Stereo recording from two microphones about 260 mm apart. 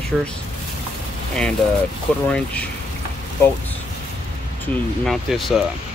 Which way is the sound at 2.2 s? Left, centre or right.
Centre.